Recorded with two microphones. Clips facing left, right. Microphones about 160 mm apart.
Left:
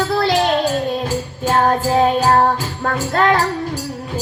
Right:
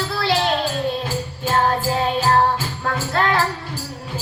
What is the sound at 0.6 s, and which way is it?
Music, 40° left (ahead or behind).